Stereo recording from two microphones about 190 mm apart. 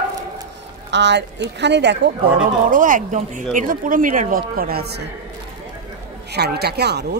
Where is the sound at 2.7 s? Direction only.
45° right (ahead or behind).